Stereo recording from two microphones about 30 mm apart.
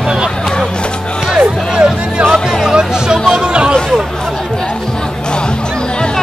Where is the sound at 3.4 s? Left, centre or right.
Right.